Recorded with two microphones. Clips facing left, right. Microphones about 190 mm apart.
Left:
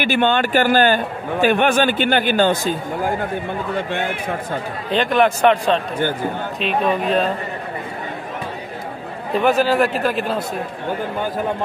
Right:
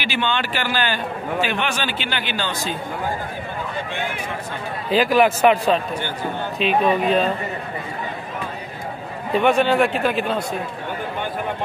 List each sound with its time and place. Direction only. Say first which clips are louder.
0.0 s a man's voice: left 6 dB; 50° left (ahead or behind)
4.9 s speech: even; 5° right (ahead or behind)
9.3 s speech: left 1 dB; centre (ahead or behind)